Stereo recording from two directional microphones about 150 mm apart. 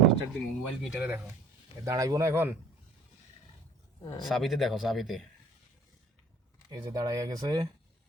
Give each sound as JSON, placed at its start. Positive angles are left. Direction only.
{"t": 0.3, "sound": "speech", "side_deg": 0}
{"t": 1.8, "sound": "speech", "side_deg": -20}
{"t": 4.2, "sound": "speech", "side_deg": 0}
{"t": 6.7, "sound": "speech", "side_deg": -25}